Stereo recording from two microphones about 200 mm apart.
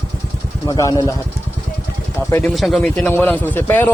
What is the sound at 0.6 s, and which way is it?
Speech, 20° left (ahead or behind).